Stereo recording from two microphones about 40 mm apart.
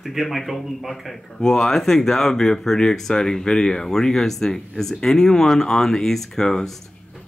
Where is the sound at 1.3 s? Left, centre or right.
Centre.